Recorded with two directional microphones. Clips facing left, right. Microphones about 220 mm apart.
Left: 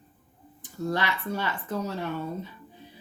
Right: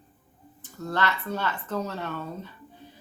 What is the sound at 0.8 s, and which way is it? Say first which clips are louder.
A woman's voice: even; 15° left (ahead or behind).